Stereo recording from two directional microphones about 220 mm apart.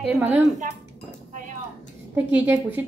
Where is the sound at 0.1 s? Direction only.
5° right (ahead or behind).